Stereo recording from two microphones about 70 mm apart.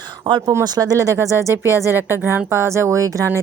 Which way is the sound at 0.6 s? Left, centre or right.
Right.